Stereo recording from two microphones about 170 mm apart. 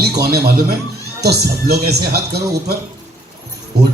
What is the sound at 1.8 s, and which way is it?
Speech, 70° right (ahead or behind).